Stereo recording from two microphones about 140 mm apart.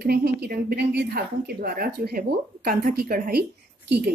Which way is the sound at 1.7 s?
90° right.